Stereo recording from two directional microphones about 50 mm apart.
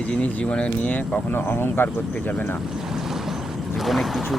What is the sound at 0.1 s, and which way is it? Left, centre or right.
Speech, left.